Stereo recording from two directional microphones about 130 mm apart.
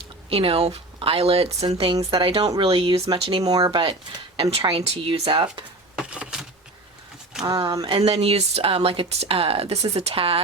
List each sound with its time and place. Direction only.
0.3 s speech: 50° right (ahead or behind)
3.4 s speech: 30° right (ahead or behind)
6.0 s a sound: 5° right (ahead or behind)
7.4 s speech: 30° right (ahead or behind)
7.9 s speech: 45° right (ahead or behind)